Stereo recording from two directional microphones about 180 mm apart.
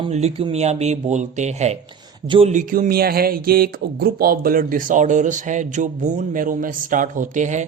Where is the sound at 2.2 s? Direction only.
30° right (ahead or behind).